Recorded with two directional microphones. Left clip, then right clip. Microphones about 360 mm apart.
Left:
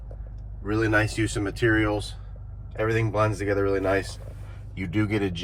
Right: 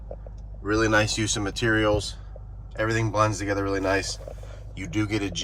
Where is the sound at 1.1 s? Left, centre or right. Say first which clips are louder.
Right 1 dB; centre.